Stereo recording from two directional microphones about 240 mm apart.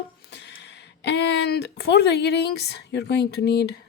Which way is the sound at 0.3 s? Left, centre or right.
Left.